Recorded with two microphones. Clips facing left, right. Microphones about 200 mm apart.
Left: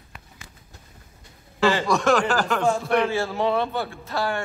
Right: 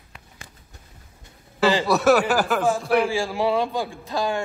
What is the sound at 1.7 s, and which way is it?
A man's voice, 5° right (ahead or behind).